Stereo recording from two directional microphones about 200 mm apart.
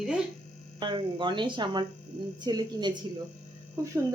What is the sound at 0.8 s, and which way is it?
A woman's voice, 25° right (ahead or behind).